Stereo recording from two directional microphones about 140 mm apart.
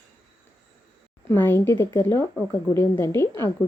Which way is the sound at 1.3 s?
15° left (ahead or behind).